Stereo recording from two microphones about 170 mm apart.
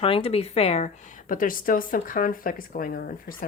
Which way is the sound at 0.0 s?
35° left (ahead or behind).